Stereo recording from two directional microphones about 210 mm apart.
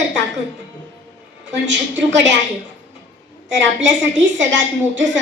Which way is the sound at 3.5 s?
60° right (ahead or behind).